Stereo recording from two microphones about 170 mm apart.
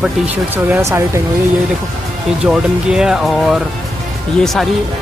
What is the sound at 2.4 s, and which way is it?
Speech, 5° right (ahead or behind).